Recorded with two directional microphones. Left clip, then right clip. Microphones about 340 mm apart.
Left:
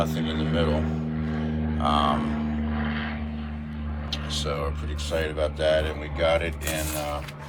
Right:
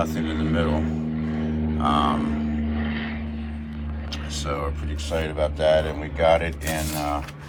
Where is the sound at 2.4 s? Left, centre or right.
Left.